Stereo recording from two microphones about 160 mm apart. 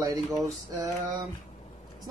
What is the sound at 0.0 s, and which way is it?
Speech, 20° right (ahead or behind).